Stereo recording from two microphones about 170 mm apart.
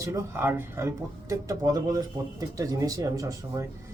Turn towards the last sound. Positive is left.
turn(degrees=-20)  # may be behind; listen again after turning